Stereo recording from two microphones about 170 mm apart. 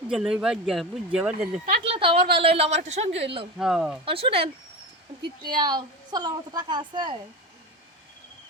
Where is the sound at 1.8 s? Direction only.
35° right (ahead or behind).